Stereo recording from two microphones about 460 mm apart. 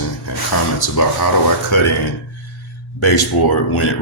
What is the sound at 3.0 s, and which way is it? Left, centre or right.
Speech, left.